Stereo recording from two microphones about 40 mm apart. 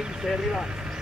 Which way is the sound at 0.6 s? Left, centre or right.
Right.